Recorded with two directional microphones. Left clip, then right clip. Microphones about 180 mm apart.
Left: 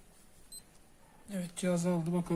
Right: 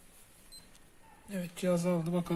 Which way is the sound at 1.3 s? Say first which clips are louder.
Right 2 dB; 25° right (ahead or behind).